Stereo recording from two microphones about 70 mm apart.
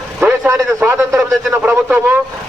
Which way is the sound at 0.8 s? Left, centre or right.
Right.